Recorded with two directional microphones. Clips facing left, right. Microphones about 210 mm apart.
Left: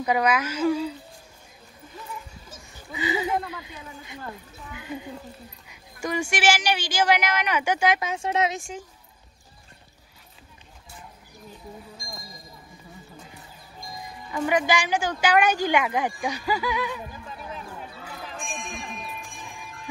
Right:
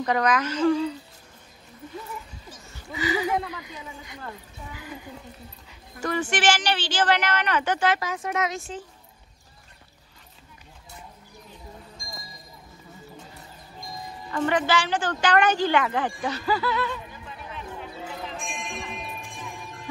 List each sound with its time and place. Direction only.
0.0 s speech: 10° left (ahead or behind)
2.5 s speech: 20° left (ahead or behind)
5.7 s speech: 10° left (ahead or behind)
8.0 s speech: 25° left (ahead or behind)
14.3 s speech: 10° left (ahead or behind)
17.3 s a sound: 40° left (ahead or behind)